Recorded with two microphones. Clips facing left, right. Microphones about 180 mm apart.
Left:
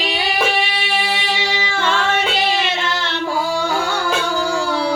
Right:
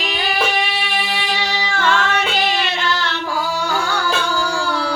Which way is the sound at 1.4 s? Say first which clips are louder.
Even; 25° left (ahead or behind).